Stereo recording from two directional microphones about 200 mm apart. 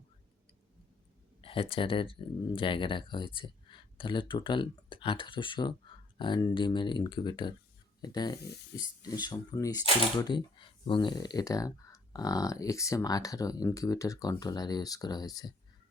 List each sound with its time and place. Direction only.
1.4 s speech: 25° left (ahead or behind)